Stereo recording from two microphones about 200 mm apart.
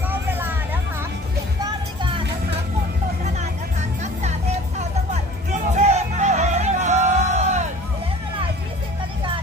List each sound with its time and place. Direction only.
0.1 s vehicle: 10° right (ahead or behind)
1.6 s music: 25° right (ahead or behind)
4.0 s music: 35° right (ahead or behind)